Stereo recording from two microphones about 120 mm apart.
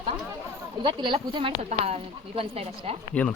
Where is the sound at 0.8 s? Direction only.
45° right (ahead or behind).